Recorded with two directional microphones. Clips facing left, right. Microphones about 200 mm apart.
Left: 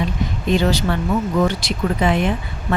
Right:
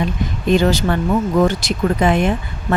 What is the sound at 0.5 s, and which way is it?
Speech, 45° right (ahead or behind).